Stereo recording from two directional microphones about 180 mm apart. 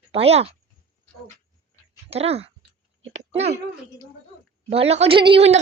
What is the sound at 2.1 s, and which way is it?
Speech, 35° right (ahead or behind).